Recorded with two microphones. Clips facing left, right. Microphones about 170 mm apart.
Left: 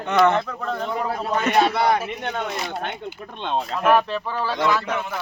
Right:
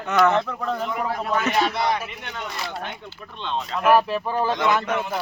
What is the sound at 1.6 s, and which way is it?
Speech, 55° left (ahead or behind).